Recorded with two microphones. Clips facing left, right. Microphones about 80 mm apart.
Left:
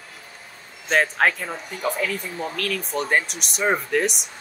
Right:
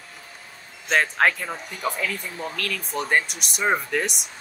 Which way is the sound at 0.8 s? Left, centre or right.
Centre.